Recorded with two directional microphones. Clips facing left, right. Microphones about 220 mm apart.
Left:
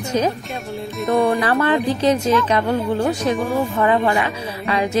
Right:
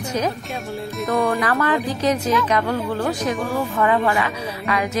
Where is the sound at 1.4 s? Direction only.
30° left (ahead or behind).